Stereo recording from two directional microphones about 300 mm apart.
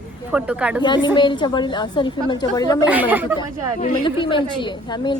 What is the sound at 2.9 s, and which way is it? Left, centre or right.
Speech, centre.